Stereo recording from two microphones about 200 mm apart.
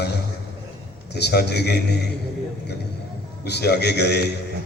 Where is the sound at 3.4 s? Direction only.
55° left (ahead or behind).